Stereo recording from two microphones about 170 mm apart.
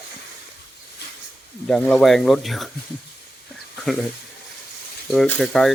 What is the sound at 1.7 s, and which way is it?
Speech, 5° left (ahead or behind).